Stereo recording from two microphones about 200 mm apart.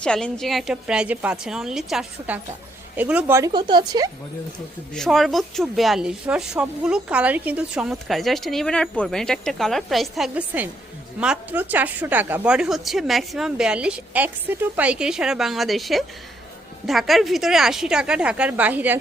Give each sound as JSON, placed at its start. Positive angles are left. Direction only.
{"t": 0.0, "sound": "speech", "side_deg": 5}
{"t": 4.9, "sound": "speech", "side_deg": 0}